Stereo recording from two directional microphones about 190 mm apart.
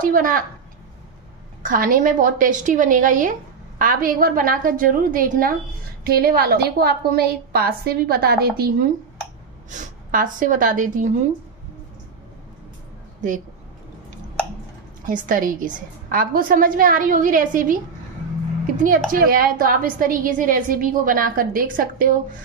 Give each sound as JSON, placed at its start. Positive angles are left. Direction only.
{"t": 0.0, "sound": "a woman's voice", "side_deg": -45}
{"t": 1.6, "sound": "a woman's voice", "side_deg": -45}
{"t": 9.7, "sound": "speech", "side_deg": -40}
{"t": 15.0, "sound": "a woman's voice", "side_deg": -45}
{"t": 18.8, "sound": "a woman's voice", "side_deg": -45}